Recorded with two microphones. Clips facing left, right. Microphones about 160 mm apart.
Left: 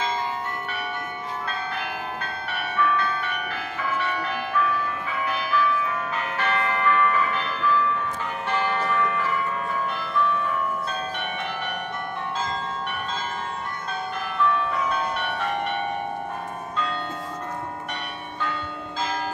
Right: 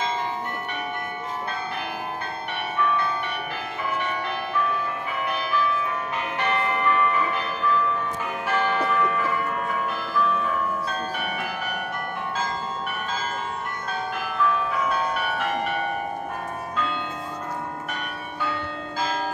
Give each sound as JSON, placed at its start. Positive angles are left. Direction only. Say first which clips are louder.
{"t": 6.3, "sound": "church bell", "louder": "right 1 dB", "side_deg": -15}
{"t": 8.5, "sound": "church bell", "louder": "right 2 dB", "side_deg": -5}
{"t": 10.1, "sound": "change ringing", "louder": "even", "side_deg": -5}
{"t": 14.7, "sound": "change ringing", "louder": "right 1 dB", "side_deg": -5}